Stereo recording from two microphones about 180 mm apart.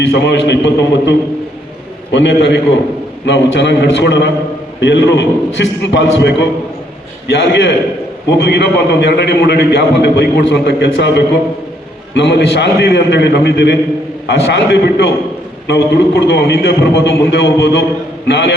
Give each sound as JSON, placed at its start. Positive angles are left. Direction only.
{"t": 0.1, "sound": "a man's voice", "side_deg": 70}
{"t": 2.1, "sound": "a man's voice", "side_deg": 75}
{"t": 12.1, "sound": "a man's voice", "side_deg": 70}